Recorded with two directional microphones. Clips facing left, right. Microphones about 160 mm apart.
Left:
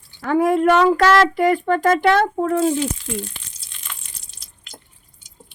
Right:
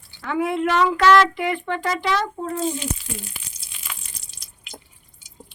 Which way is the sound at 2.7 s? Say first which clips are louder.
Left 7 dB; 10° right (ahead or behind).